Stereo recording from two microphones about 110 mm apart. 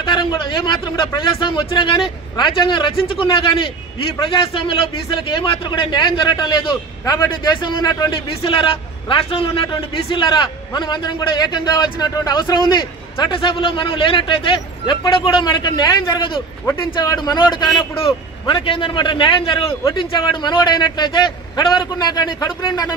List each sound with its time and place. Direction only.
0.0 s a man's voice: 45° left (ahead or behind)
5.1 s a man's voice: 45° left (ahead or behind)
8.4 s a man's voice: 50° left (ahead or behind)
17.9 s a man's voice: 55° left (ahead or behind); by 22.9 s 35° left (ahead or behind)